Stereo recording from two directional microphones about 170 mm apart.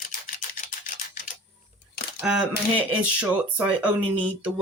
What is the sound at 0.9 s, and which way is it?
Typing, 50° left (ahead or behind).